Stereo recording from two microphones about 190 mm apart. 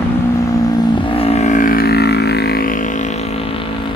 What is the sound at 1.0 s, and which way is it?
Vehicle, 30° left (ahead or behind).